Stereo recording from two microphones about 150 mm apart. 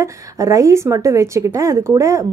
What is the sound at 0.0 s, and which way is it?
A woman's voice, 20° right (ahead or behind).